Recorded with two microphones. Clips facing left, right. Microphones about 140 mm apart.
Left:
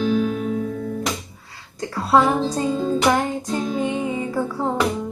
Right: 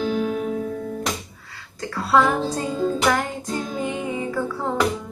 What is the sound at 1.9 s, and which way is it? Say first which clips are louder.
Music: left 2 dB; 20° left (ahead or behind).